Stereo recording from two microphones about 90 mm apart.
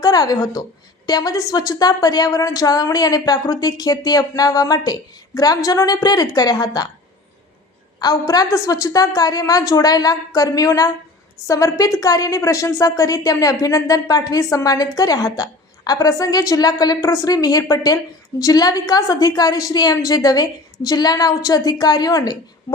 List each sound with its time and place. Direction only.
0.0 s a woman's voice: 45° left (ahead or behind)
7.9 s a woman's voice: 45° left (ahead or behind)